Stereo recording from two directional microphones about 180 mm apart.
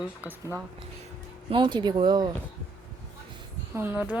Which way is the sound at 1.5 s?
25° right (ahead or behind).